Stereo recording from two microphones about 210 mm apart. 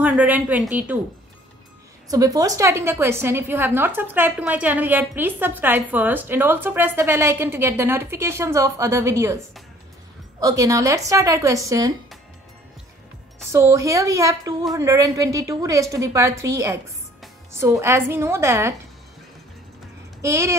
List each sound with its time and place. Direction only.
0.0 s a woman's voice: 5° right (ahead or behind)
2.0 s a woman's voice: 15° right (ahead or behind)
10.4 s a woman's voice: 15° right (ahead or behind)
13.5 s a woman's voice: 15° right (ahead or behind)
20.2 s speech: 15° right (ahead or behind)